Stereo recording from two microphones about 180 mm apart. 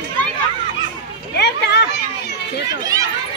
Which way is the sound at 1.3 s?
65° left (ahead or behind).